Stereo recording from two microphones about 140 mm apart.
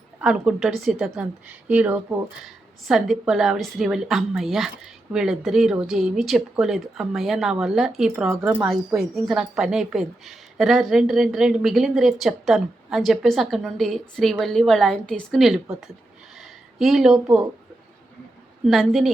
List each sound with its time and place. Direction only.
0.2 s a woman's voice: 5° right (ahead or behind)
8.3 s speech: 15° right (ahead or behind)
9.0 s a woman's voice: centre (ahead or behind)
16.4 s a sound: centre (ahead or behind)
18.6 s a woman's voice: centre (ahead or behind)